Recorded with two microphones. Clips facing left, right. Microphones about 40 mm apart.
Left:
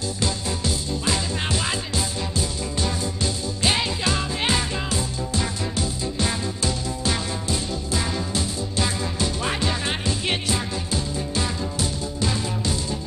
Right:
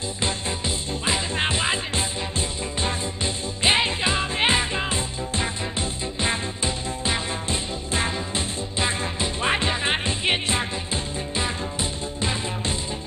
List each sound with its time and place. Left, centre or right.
0.2 s music: right